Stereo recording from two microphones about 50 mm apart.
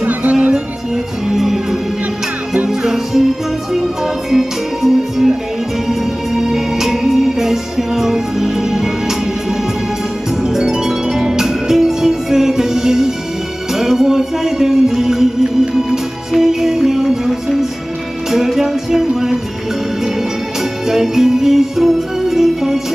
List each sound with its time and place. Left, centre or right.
0.0 s music: right
1.3 s music: centre
10.4 s music: centre
20.8 s music: centre